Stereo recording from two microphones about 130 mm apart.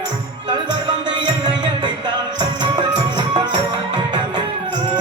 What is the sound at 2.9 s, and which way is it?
Music, 35° right (ahead or behind).